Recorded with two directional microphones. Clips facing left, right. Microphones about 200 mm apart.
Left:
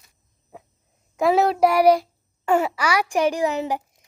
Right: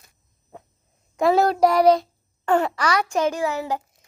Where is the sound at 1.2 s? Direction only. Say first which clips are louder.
Even; 5° left (ahead or behind).